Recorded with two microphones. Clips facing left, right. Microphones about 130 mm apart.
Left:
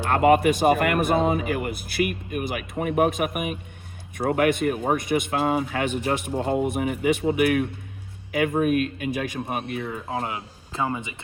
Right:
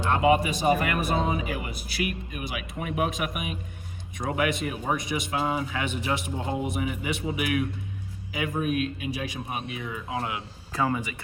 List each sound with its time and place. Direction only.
0.1 s speech: 55° left (ahead or behind); by 10.4 s 35° left (ahead or behind)
10.7 s speech: 20° left (ahead or behind)